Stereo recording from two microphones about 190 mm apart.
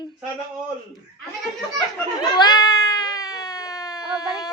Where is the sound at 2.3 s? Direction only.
20° left (ahead or behind).